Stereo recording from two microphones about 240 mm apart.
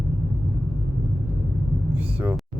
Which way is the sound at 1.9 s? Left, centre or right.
Centre.